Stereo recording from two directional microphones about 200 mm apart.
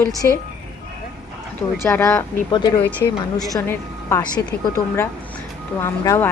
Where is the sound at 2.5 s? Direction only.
20° left (ahead or behind).